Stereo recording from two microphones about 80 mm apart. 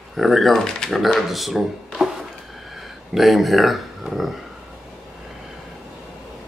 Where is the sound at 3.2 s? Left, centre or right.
Centre.